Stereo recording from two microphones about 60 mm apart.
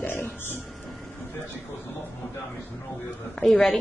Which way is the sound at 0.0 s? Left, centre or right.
Left.